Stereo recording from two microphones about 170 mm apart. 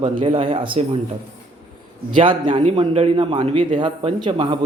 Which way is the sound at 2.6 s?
35° right (ahead or behind).